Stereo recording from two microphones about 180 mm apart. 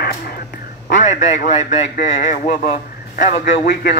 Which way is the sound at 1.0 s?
40° left (ahead or behind).